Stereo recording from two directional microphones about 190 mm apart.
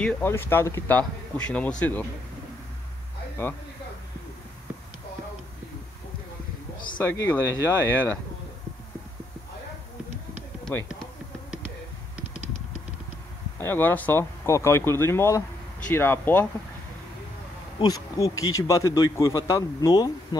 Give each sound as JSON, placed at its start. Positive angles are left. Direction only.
{"t": 0.0, "sound": "speech", "side_deg": 10}
{"t": 7.1, "sound": "speech", "side_deg": 15}
{"t": 10.6, "sound": "run", "side_deg": 10}
{"t": 13.6, "sound": "speech", "side_deg": 10}
{"t": 17.7, "sound": "speech", "side_deg": 20}